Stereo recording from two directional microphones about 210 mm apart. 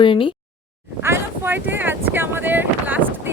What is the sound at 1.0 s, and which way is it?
Wind noise, 10° right (ahead or behind).